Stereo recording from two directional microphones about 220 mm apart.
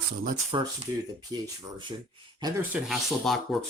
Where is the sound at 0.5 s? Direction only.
20° right (ahead or behind).